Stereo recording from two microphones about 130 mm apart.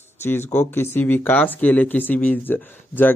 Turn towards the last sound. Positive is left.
turn(degrees=15)  # may be behind; listen again after turning